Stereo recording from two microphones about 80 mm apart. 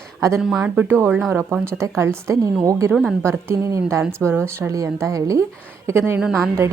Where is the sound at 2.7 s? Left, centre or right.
Right.